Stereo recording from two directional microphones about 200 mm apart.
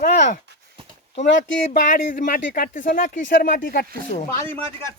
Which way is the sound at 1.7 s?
40° left (ahead or behind).